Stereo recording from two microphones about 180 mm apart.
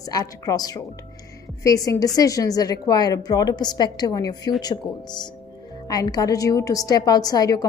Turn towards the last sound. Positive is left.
turn(degrees=20)  # may be behind; listen again after turning